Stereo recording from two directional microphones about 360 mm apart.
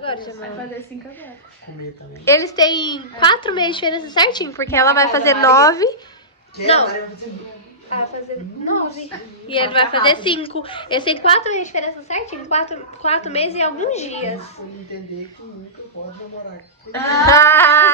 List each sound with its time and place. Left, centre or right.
0.0 s a woman's voice: centre
2.2 s a woman's voice: centre
8.8 s a woman's voice: centre
16.9 s a woman's voice: centre